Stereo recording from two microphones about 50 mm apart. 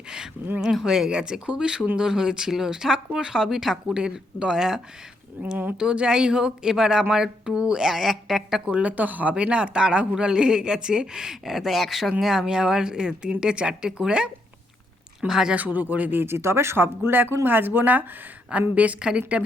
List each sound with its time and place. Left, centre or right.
0.6 s speech: centre
5.4 s speech: right
5.7 s speech: centre
8.6 s speech: right
9.3 s speech: right
15.3 s speech: centre
15.5 s a woman's voice: right
18.9 s speech: centre